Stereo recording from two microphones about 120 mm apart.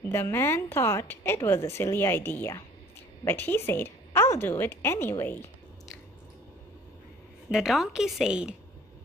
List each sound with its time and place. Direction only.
0.0 s a woman's voice: 20° left (ahead or behind)
7.4 s a woman's voice: 5° right (ahead or behind)